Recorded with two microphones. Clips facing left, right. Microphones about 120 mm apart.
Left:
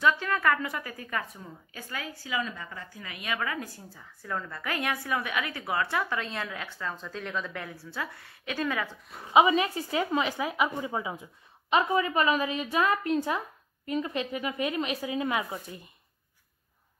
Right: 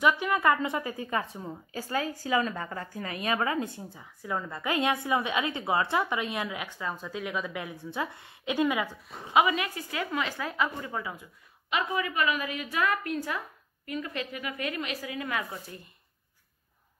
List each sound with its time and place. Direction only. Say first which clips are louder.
0.0 s a woman's voice: right 1 dB; 15° right (ahead or behind)
9.3 s a woman's voice: left 3 dB; 25° left (ahead or behind)
11.7 s a woman's voice: left 5 dB; 35° left (ahead or behind); by 15.9 s 15° left (ahead or behind)